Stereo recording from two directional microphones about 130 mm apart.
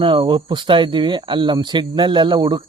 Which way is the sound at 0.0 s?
40° right (ahead or behind).